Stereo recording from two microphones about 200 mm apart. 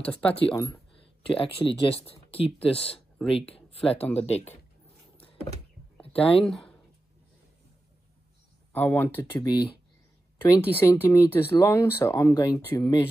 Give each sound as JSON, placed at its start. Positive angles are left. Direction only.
{"t": 0.0, "sound": "speech", "side_deg": 5}
{"t": 1.3, "sound": "speech", "side_deg": 25}
{"t": 4.0, "sound": "speech", "side_deg": 10}
{"t": 6.1, "sound": "speech", "side_deg": 30}
{"t": 6.4, "sound": "speech", "side_deg": 5}
{"t": 8.7, "sound": "speech", "side_deg": 10}